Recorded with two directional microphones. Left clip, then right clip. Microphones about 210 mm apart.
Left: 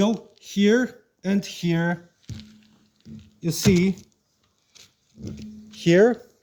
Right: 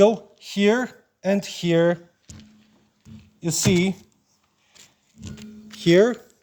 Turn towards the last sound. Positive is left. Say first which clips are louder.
# even
turn(degrees=-40)  # may be behind; listen again after turning